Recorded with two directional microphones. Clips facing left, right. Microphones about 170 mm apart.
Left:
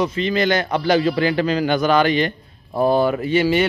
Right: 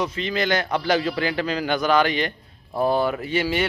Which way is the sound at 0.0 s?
Centre (ahead or behind).